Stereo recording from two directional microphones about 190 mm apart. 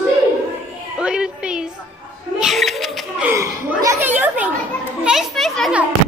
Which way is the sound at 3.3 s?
15° right (ahead or behind).